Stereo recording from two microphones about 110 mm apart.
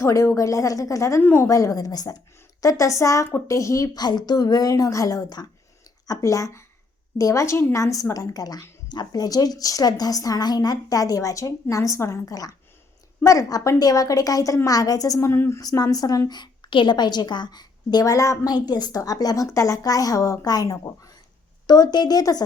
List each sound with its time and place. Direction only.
0.0 s a woman's voice: 25° left (ahead or behind)
1.2 s a woman's voice: 15° left (ahead or behind)
1.5 s a woman's voice: 30° left (ahead or behind)
15.6 s a woman's voice: 35° left (ahead or behind)